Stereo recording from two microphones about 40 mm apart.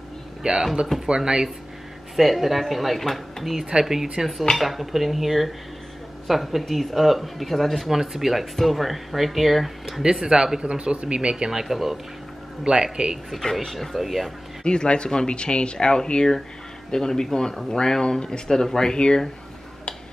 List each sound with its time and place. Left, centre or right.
0.4 s speech: centre
2.1 s speech: centre
3.5 s speech: centre
10.0 s speech: centre
11.6 s speech: centre
12.6 s speech: centre
13.3 s speech: centre
14.6 s speech: left